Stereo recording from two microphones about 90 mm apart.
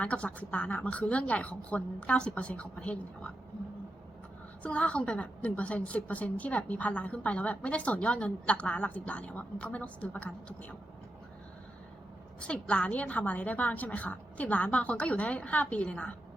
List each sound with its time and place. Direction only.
0.0 s a woman's voice: 15° left (ahead or behind)
4.6 s a woman's voice: 15° left (ahead or behind)
12.4 s a woman's voice: 15° left (ahead or behind)